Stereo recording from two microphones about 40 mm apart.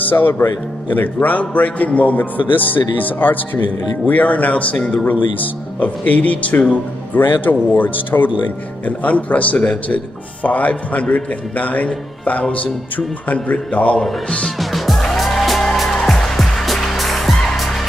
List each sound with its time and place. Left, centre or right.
0.0 s speech: left
0.9 s a man's voice: left
2.5 s a man's voice: left
8.8 s a man's voice: left
14.6 s music: centre